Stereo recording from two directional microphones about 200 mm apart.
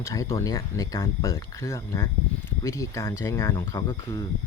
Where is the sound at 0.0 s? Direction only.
15° left (ahead or behind).